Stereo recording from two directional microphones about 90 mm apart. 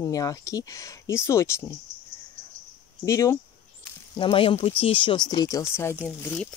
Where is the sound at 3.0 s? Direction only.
35° left (ahead or behind).